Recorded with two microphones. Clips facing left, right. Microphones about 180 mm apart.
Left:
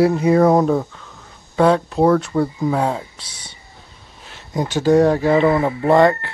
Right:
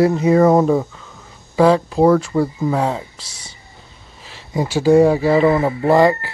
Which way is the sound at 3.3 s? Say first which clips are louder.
Even; 25° left (ahead or behind).